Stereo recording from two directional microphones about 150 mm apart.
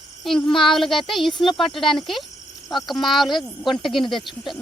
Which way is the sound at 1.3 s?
35° left (ahead or behind).